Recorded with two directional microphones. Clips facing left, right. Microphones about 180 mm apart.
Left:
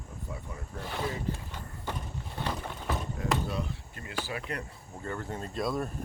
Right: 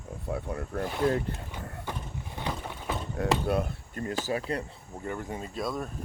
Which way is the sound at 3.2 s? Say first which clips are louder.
Right 8 dB; 60° right (ahead or behind).